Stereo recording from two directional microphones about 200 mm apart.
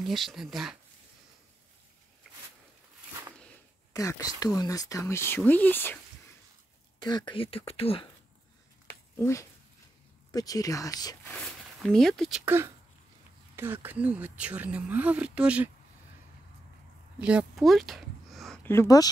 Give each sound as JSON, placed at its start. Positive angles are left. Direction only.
{"t": 0.0, "sound": "speech", "side_deg": 0}
{"t": 3.1, "sound": "a sound", "side_deg": -15}
{"t": 3.9, "sound": "speech", "side_deg": 15}
{"t": 7.0, "sound": "speech", "side_deg": 20}
{"t": 9.1, "sound": "speech", "side_deg": 15}
{"t": 11.2, "sound": "speech", "side_deg": 5}
{"t": 17.2, "sound": "speech", "side_deg": -5}